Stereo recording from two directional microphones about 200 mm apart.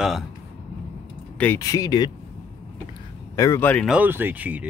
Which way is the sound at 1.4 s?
15° left (ahead or behind).